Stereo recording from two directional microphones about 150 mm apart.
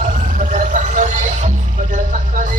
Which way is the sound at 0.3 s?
55° right (ahead or behind).